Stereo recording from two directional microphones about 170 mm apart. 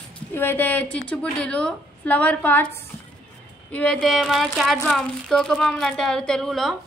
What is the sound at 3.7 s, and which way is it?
A woman's voice, 5° left (ahead or behind).